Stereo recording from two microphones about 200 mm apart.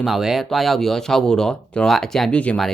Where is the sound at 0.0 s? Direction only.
Centre (ahead or behind).